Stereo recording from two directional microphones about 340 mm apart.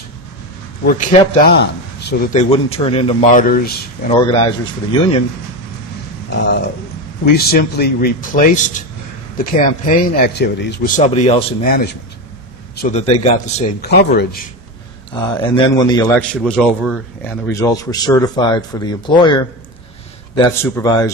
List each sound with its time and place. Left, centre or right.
1.6 s a man's voice: left
4.3 s a man's voice: centre
6.3 s a man's voice: left
15.1 s a man's voice: centre